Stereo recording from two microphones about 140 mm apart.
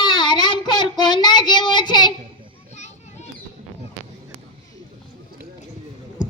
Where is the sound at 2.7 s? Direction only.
55° left (ahead or behind).